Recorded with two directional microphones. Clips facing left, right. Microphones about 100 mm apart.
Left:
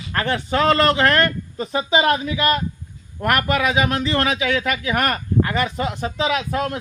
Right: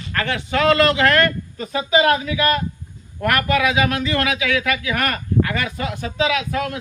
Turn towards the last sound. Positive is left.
turn(degrees=30)  # may be behind; listen again after turning